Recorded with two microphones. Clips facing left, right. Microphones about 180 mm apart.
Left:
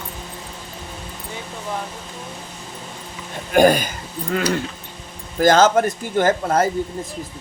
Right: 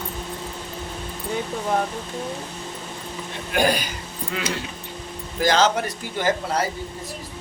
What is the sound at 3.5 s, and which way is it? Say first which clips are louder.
Speech: left 7 dB; 50° left (ahead or behind).